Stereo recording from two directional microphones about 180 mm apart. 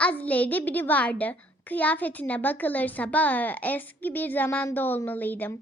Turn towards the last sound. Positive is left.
turn(degrees=10)  # may be behind; listen again after turning